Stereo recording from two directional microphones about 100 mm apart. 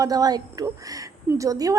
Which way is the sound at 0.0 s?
40° right (ahead or behind).